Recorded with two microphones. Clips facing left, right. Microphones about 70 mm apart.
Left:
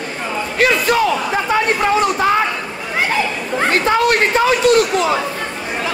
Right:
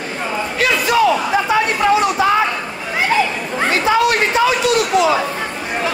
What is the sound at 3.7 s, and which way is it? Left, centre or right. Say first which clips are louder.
Chatter: even; left.